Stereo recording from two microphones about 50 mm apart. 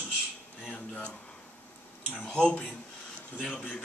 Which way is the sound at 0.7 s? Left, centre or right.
Left.